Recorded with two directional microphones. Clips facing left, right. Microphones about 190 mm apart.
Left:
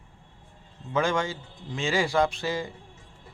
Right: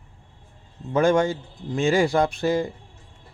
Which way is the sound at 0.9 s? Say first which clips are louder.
Right 7 dB; 40° right (ahead or behind).